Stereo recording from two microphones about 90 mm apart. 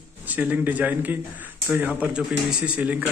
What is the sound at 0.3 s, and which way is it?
A man's voice, 20° right (ahead or behind).